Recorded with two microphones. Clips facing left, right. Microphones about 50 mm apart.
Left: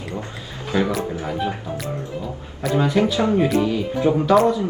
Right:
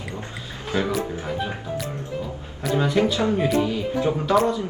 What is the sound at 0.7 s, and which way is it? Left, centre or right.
Speech, left.